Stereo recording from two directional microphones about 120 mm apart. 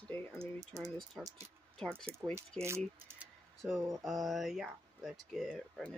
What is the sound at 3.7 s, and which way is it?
Speech, centre (ahead or behind).